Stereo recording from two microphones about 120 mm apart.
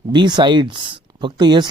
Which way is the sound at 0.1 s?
40° right (ahead or behind).